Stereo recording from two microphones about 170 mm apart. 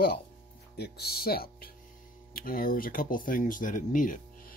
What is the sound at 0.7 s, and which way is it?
Speech, 70° left (ahead or behind).